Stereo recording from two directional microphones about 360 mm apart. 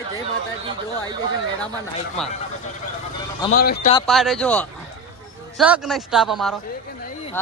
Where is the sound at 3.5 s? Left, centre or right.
Left.